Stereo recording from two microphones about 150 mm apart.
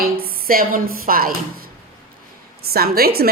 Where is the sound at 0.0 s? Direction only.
80° right.